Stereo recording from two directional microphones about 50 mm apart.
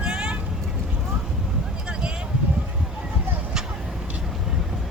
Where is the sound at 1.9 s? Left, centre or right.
Centre.